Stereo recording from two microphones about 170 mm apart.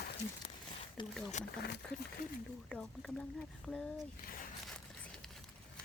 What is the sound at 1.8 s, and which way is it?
Speech, 5° left (ahead or behind).